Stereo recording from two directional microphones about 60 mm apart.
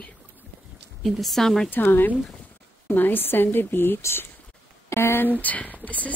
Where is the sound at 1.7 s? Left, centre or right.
Left.